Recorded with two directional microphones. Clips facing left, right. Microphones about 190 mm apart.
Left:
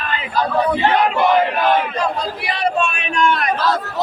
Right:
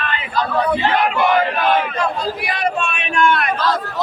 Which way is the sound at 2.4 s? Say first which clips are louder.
Left 5 dB; 30° left (ahead or behind).